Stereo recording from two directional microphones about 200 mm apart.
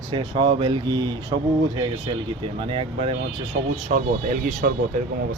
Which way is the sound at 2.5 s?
25° right (ahead or behind).